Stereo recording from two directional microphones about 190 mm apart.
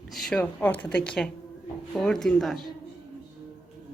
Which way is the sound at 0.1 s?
5° left (ahead or behind).